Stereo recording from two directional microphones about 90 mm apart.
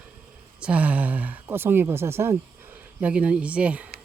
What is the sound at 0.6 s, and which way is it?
Speech, 15° right (ahead or behind).